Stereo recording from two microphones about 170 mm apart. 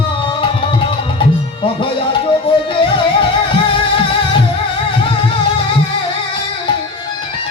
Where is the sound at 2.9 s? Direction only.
30° left (ahead or behind).